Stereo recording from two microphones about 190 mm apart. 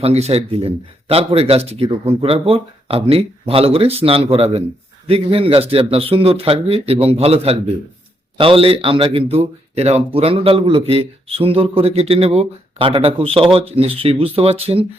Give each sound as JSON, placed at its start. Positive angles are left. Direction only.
{"t": 0.0, "sound": "a man's voice", "side_deg": -35}